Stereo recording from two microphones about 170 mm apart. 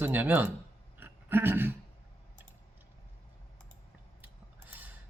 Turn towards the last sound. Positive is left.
turn(degrees=-10)  # may be behind; listen again after turning